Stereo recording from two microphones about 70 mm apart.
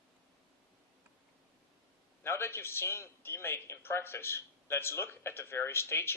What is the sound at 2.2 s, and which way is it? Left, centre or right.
A man's voice, left.